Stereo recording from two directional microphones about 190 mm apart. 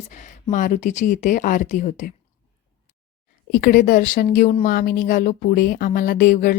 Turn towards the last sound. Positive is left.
turn(degrees=45)  # may be behind; listen again after turning